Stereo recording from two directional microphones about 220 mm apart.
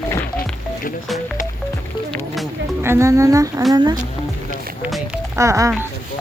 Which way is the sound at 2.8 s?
15° right (ahead or behind).